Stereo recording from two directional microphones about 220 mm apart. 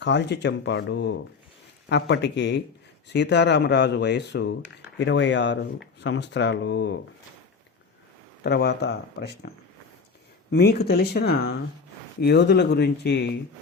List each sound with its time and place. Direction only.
0.0 s speech: 50° left (ahead or behind)
8.4 s speech: 50° left (ahead or behind)
10.5 s speech: 45° left (ahead or behind)